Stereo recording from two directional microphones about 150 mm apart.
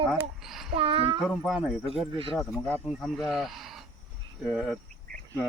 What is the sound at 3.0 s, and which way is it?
Speech, centre (ahead or behind).